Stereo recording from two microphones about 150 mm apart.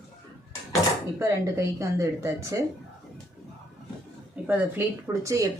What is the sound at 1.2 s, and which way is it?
Speech, 20° right (ahead or behind).